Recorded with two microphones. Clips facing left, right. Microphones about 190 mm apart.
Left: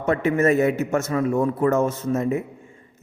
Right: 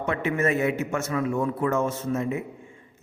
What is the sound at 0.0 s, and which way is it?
A man's voice, 40° left (ahead or behind).